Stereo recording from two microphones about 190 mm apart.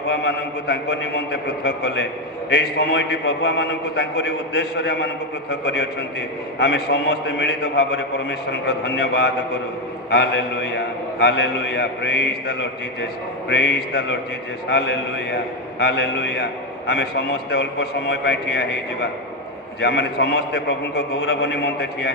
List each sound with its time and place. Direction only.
0.1 s a man's voice: 60° left (ahead or behind)